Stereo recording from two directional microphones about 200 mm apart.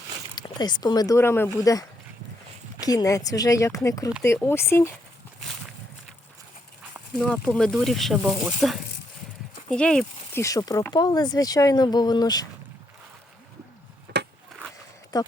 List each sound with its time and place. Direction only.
0.3 s speech: 20° left (ahead or behind)
2.8 s speech: 15° left (ahead or behind)
7.1 s speech: centre (ahead or behind)
10.4 s speech: 15° left (ahead or behind)
14.1 s a sound: 55° right (ahead or behind)
15.1 s speech: 20° left (ahead or behind)